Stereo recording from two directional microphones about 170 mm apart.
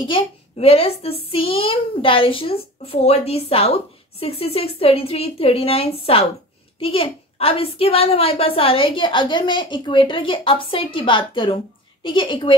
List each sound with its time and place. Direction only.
0.0 s a woman's voice: 35° left (ahead or behind)